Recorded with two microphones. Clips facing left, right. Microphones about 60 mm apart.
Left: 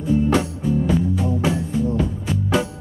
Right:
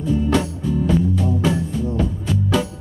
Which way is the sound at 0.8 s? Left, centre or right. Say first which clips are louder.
Right 1 dB; centre.